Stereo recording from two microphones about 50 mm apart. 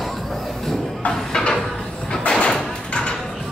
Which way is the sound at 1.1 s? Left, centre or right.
Centre.